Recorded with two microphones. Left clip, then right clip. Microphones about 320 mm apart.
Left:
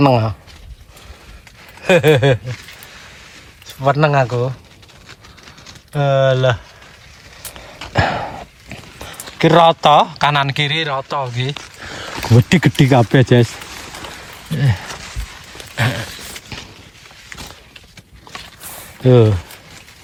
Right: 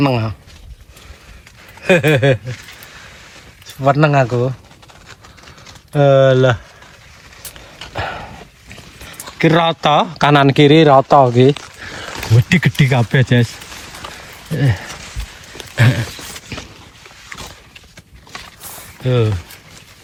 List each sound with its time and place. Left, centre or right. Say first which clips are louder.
0.0 s speech: left 4 dB; centre
1.8 s speech: left 1 dB; centre
3.7 s speech: right 1 dB; centre
5.9 s speech: right 4 dB; centre
7.8 s a sound: left 2 dB; centre
9.2 s speech: left 3 dB; centre
11.8 s a sound: even; centre
12.4 s speech: left 1 dB; centre
14.5 s speech: right 2 dB; centre
15.7 s a sound: right 2 dB; centre
19.0 s speech: left 6 dB; centre